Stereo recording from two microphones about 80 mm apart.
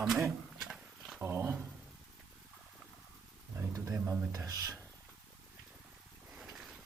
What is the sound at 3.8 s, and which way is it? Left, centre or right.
Speech, right.